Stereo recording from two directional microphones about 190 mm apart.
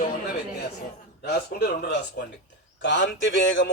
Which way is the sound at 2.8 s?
75° left (ahead or behind).